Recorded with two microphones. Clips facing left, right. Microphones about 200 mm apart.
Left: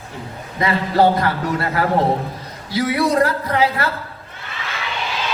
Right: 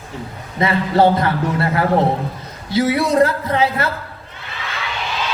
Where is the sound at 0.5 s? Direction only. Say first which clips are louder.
Right 1 dB; 25° right (ahead or behind).